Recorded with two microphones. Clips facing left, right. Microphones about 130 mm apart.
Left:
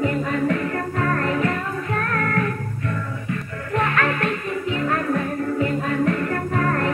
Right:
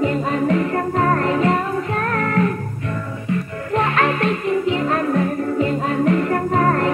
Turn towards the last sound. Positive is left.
turn(degrees=-20)  # may be behind; listen again after turning